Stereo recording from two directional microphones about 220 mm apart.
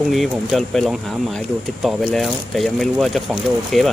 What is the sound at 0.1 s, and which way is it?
Speech, centre (ahead or behind).